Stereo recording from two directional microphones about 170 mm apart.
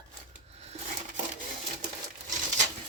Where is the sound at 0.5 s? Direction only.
40° right (ahead or behind).